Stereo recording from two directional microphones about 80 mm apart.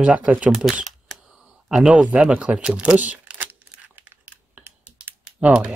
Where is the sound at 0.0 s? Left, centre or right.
Centre.